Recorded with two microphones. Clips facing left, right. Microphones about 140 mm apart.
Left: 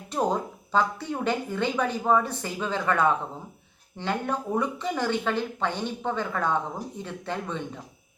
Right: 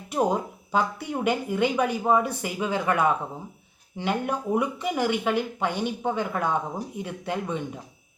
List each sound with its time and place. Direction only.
0.1 s speech: 10° right (ahead or behind)